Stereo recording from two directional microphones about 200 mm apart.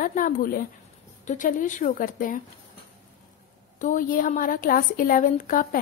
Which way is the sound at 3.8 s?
40° left (ahead or behind).